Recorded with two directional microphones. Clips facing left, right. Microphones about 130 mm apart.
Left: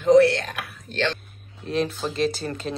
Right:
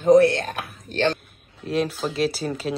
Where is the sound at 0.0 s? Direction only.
50° right (ahead or behind).